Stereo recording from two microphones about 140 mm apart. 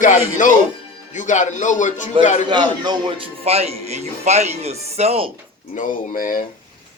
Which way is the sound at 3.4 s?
45° right (ahead or behind).